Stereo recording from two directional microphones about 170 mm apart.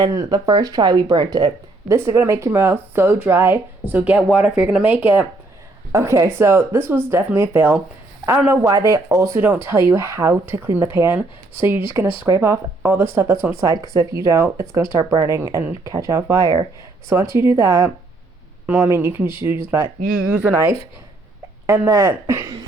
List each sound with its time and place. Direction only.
0.0 s speech: 20° right (ahead or behind)